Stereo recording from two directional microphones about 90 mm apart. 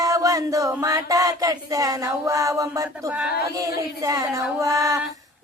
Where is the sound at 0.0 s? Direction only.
40° right (ahead or behind).